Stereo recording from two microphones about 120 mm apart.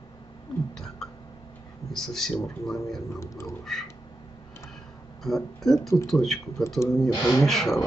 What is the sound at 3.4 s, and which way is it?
Speech, centre (ahead or behind).